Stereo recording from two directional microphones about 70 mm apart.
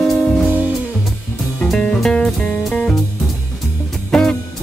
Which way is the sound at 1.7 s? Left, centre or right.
Centre.